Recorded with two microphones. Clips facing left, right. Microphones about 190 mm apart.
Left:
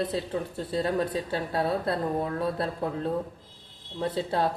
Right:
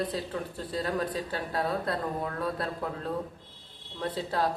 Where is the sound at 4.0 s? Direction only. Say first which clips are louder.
Left 3 dB; 25° left (ahead or behind).